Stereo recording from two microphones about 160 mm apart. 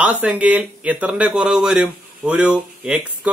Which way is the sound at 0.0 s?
10° right (ahead or behind).